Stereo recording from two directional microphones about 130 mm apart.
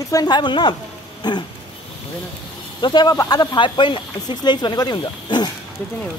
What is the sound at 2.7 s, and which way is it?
Speech, 35° left (ahead or behind).